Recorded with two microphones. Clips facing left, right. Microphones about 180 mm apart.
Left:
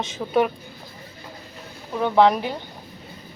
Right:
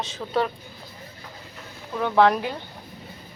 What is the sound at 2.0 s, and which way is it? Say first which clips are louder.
Speech: left 2 dB; 15° left (ahead or behind).